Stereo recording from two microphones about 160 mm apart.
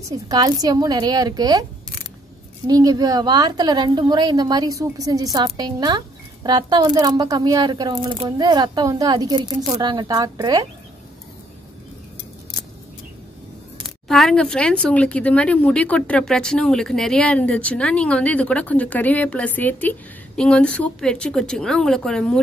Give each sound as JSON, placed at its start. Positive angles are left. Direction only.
{"t": 0.1, "sound": "a woman's voice", "side_deg": -25}
{"t": 13.8, "sound": "speech", "side_deg": 0}